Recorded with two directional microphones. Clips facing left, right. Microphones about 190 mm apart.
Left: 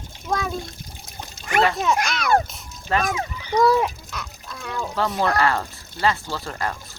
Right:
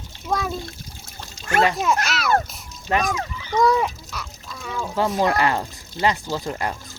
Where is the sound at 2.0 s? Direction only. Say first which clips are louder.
Right 1 dB; 5° right (ahead or behind).